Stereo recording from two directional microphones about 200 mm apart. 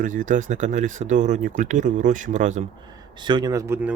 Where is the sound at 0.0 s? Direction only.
40° right (ahead or behind).